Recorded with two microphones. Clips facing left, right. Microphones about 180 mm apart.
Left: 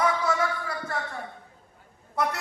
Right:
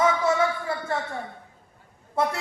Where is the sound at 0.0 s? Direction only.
25° right (ahead or behind).